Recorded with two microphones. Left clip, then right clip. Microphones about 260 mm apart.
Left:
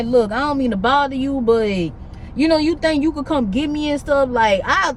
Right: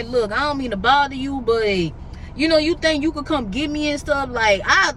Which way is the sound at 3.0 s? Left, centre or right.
Centre.